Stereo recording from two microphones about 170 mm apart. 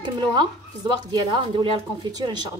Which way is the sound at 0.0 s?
25° right (ahead or behind).